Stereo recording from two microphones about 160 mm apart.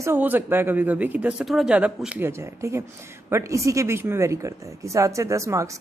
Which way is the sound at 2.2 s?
15° right (ahead or behind).